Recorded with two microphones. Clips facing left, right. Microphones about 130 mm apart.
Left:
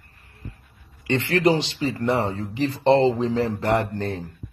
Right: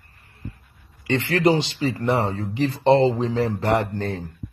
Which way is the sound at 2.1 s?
35° right (ahead or behind).